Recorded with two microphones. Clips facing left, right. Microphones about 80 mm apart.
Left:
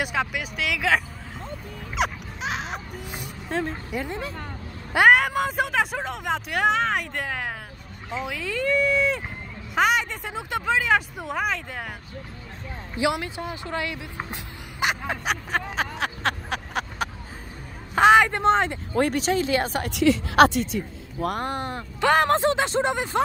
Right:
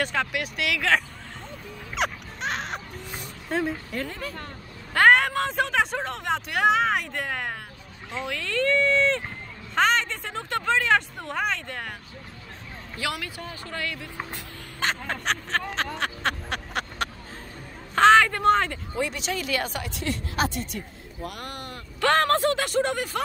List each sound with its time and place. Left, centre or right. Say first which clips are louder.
0.0 s speech: even; centre
2.0 s music: left 2 dB; centre
3.4 s a woman's voice: right 1 dB; centre
3.9 s speech: left 2 dB; centre
4.9 s speech: left 1 dB; centre
12.9 s speech: left 7 dB; left; by 17.1 s centre
17.9 s speech: left 1 dB; centre
18.9 s speech: left 7 dB; left
19.9 s speech: left 10 dB; left
21.4 s speech: left 8 dB; left
22.0 s speech: left 2 dB; centre